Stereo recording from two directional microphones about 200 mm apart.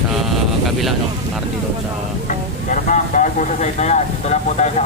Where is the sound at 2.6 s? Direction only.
40° left (ahead or behind).